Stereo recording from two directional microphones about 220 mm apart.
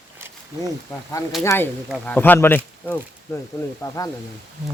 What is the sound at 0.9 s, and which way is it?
Speech, 15° left (ahead or behind).